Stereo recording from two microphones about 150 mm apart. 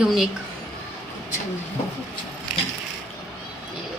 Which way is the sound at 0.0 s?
Centre (ahead or behind).